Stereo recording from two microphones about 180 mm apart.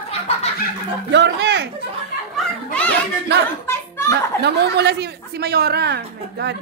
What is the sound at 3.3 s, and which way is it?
A woman's voice, 70° right (ahead or behind).